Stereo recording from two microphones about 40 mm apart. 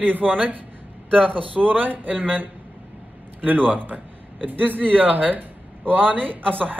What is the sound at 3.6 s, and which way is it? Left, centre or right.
A man's voice, right.